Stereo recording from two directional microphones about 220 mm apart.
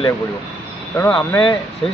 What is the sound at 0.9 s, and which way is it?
Speech, 10° left (ahead or behind).